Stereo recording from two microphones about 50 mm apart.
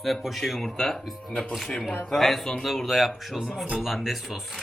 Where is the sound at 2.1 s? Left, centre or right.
Centre.